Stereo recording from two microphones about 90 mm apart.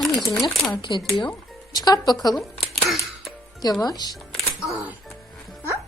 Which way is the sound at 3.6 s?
45° left (ahead or behind).